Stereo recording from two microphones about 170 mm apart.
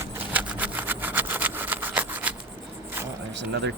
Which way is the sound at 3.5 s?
90° right.